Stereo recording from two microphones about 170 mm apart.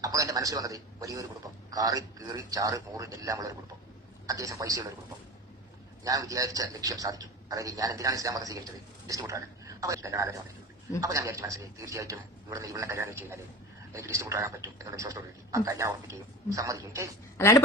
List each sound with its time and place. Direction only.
0.0 s a man's voice: 20° right (ahead or behind)
6.1 s a man's voice: 20° right (ahead or behind)
17.3 s a woman's voice: 15° left (ahead or behind)